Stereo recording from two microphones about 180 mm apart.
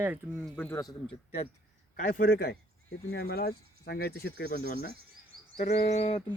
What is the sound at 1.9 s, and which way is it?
A man's voice, 45° left (ahead or behind).